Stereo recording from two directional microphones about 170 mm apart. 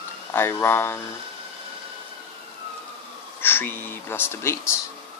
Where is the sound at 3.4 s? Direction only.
10° left (ahead or behind).